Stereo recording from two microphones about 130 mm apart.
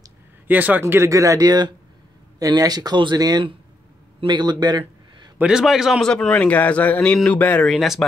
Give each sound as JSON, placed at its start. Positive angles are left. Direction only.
{"t": 0.5, "sound": "a man's voice", "side_deg": -15}
{"t": 5.4, "sound": "a man's voice", "side_deg": -5}
{"t": 7.7, "sound": "speech", "side_deg": 0}